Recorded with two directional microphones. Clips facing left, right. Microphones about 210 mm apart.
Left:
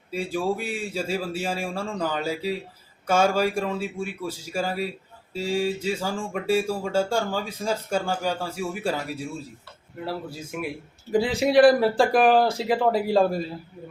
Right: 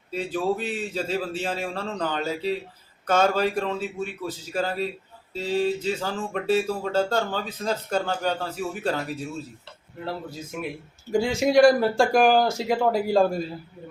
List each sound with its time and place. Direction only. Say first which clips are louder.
0.1 s speech: even; 10° left (ahead or behind)